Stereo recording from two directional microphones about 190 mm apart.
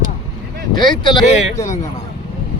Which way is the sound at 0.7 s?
25° left (ahead or behind).